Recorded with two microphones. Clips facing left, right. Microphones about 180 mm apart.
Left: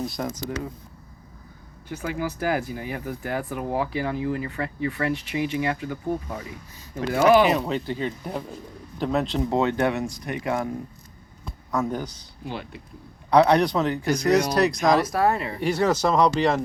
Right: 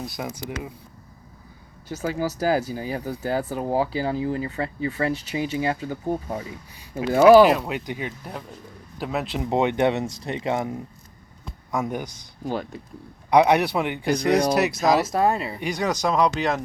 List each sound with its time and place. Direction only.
0.0 s speech: 5° right (ahead or behind)
1.9 s speech: 40° right (ahead or behind)
7.4 s speech: 5° right (ahead or behind)
8.2 s speech: centre (ahead or behind)
9.5 s speech: 20° right (ahead or behind)
12.5 s speech: 40° right (ahead or behind)
13.3 s speech: 15° right (ahead or behind)
14.2 s speech: 30° right (ahead or behind)
14.5 s speech: 5° right (ahead or behind)
14.9 s speech: 20° right (ahead or behind)